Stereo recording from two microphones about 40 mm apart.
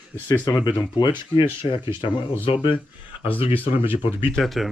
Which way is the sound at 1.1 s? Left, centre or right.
Right.